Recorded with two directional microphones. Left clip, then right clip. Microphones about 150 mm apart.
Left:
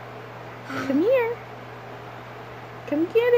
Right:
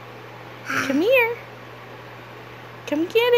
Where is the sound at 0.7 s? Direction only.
25° right (ahead or behind).